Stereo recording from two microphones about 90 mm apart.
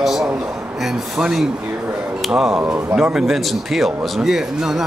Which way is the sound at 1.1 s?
5° right (ahead or behind).